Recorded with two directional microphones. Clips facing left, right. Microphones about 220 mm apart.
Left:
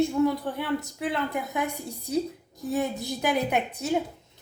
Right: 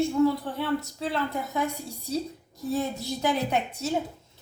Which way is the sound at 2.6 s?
15° left (ahead or behind).